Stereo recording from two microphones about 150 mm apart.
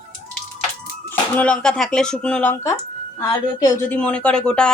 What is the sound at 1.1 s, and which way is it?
A woman's voice, 10° left (ahead or behind).